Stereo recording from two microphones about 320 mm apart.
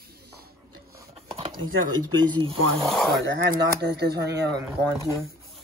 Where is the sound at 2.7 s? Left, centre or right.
Centre.